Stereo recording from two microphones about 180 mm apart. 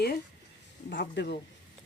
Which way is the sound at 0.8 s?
75° left (ahead or behind).